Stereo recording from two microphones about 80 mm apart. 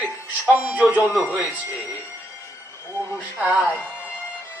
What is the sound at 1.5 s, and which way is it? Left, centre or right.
Speech, left.